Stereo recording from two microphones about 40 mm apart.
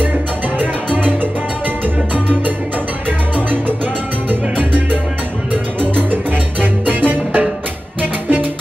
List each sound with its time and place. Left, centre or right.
0.9 s salsa music: right
2.1 s music: right
4.3 s salsa music: right
5.8 s music: right